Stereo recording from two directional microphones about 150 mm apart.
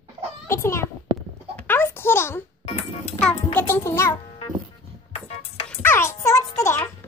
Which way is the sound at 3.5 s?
15° left (ahead or behind).